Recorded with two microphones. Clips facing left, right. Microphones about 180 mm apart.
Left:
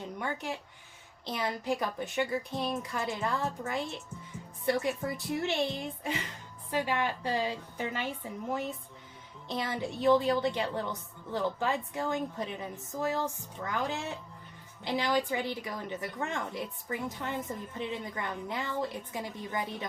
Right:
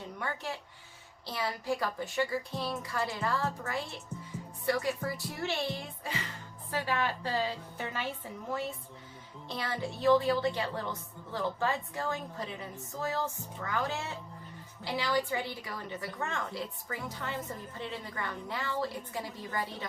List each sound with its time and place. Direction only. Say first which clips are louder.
0.2 s a woman's voice: left 1 dB; 15° left (ahead or behind)